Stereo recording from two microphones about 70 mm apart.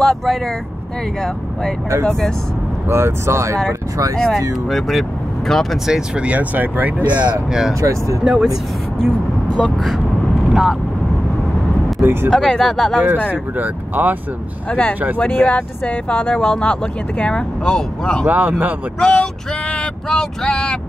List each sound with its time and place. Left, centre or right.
0.0 s speech: centre
2.9 s speech: right
4.3 s speech: centre
5.9 s speech: centre
7.8 s speech: right
8.2 s speech: centre
10.5 s speech: centre
12.0 s speech: right
12.3 s speech: centre
13.3 s speech: right
14.7 s speech: left
17.2 s speech: centre
18.2 s speech: right
18.9 s speech: centre